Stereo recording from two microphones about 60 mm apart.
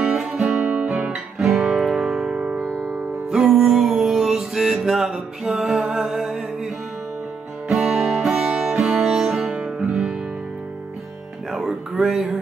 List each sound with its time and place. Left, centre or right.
0.0 s music: centre
0.7 s guitar: centre
1.6 s music: centre
3.3 s music: centre
7.7 s music: centre
11.5 s a sound: centre